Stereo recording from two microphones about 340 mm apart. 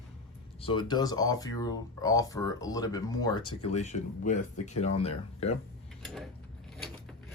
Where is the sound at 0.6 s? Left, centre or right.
Centre.